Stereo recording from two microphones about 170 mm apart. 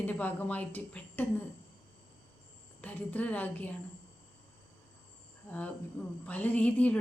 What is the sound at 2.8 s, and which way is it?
Speech, 10° left (ahead or behind).